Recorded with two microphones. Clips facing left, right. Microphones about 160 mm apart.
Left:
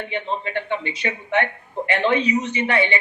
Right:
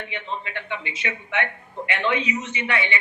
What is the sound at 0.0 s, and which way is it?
A man's voice, 35° left (ahead or behind).